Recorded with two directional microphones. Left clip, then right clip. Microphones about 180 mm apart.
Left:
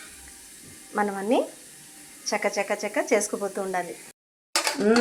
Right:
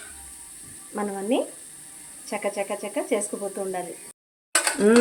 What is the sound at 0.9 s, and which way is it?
Speech, 15° right (ahead or behind).